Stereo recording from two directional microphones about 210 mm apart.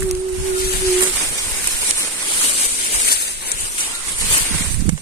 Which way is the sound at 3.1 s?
50° left (ahead or behind).